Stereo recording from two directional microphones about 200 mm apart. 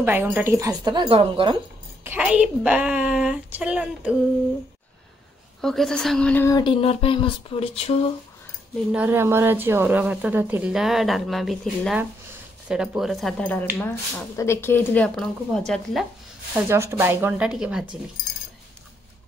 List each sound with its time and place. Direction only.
0.0 s speech: 10° right (ahead or behind); by 1.6 s 25° right (ahead or behind)
2.0 s a woman's voice: 5° right (ahead or behind)
5.6 s speech: centre (ahead or behind); by 8.1 s 30° left (ahead or behind)
8.9 s a woman's voice: 10° right (ahead or behind)
16.5 s a woman's voice: 10° right (ahead or behind)